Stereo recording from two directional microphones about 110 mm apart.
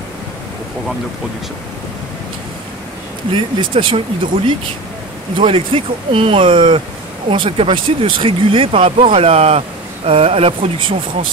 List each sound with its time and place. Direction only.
3.3 s speech: 50° right (ahead or behind)